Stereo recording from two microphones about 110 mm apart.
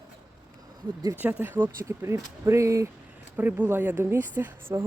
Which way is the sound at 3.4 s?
15° right (ahead or behind).